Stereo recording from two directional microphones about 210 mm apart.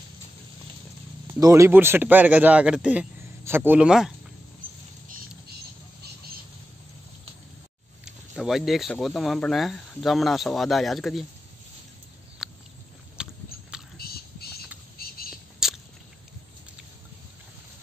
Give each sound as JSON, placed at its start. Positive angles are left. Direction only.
{"t": 1.2, "sound": "a man's voice", "side_deg": -15}
{"t": 8.0, "sound": "speech", "side_deg": 0}
{"t": 12.4, "sound": "a sound", "side_deg": 0}
{"t": 13.2, "sound": "biting", "side_deg": -5}
{"t": 13.9, "sound": "whispering", "side_deg": 45}
{"t": 15.6, "sound": "biting", "side_deg": 0}